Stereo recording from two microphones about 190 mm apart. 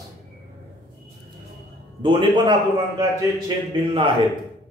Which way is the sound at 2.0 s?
25° right (ahead or behind).